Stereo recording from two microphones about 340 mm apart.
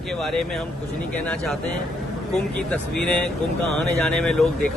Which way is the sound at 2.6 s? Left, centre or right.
Centre.